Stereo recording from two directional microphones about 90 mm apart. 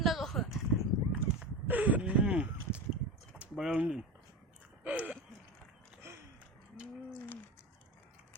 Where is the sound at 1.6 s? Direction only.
15° right (ahead or behind).